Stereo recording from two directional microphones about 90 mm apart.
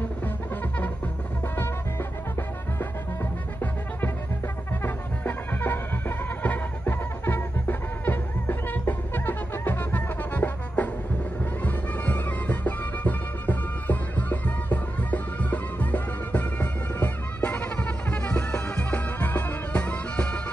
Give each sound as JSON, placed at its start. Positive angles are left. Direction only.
{"t": 4.8, "sound": "music", "side_deg": 20}